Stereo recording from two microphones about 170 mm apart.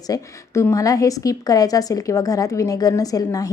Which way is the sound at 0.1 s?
15° left (ahead or behind).